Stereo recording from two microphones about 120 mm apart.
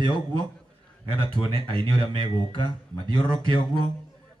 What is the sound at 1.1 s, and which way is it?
Speech, 40° left (ahead or behind).